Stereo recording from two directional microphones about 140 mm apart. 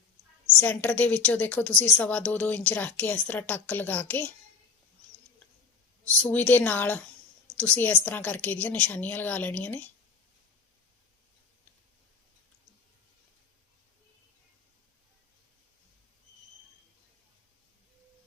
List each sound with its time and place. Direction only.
0.6 s a woman's voice: 10° left (ahead or behind)
6.1 s a woman's voice: 10° left (ahead or behind)